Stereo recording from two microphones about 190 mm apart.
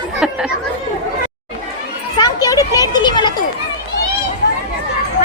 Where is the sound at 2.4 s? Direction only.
20° left (ahead or behind).